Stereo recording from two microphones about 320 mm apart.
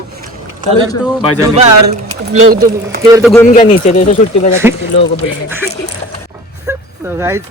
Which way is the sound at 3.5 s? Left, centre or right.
Left.